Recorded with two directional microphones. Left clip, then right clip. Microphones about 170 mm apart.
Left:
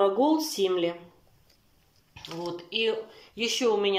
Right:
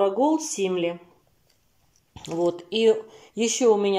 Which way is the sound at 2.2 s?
45° right (ahead or behind).